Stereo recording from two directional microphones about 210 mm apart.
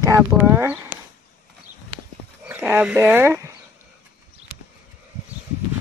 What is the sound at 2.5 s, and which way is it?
Speech, 10° right (ahead or behind).